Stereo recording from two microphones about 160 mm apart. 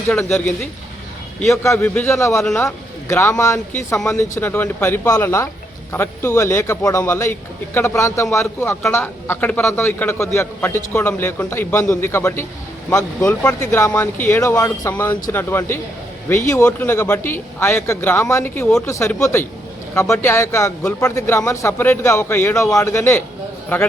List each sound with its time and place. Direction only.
0.1 s a man's voice: 10° left (ahead or behind)
1.6 s a man's voice: 15° left (ahead or behind)
13.6 s a man's voice: 20° left (ahead or behind)